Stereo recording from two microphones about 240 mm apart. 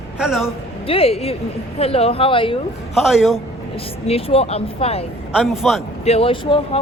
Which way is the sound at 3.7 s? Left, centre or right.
Left.